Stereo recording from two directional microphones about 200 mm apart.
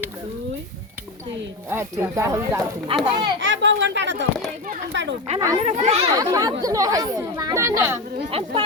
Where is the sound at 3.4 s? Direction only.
65° right (ahead or behind).